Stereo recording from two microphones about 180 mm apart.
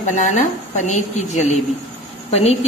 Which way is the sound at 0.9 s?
40° left (ahead or behind).